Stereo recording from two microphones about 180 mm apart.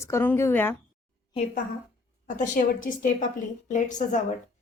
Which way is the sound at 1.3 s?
40° left (ahead or behind).